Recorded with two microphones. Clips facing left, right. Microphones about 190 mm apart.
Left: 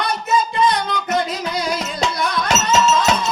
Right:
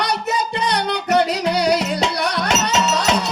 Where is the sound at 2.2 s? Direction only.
70° right (ahead or behind).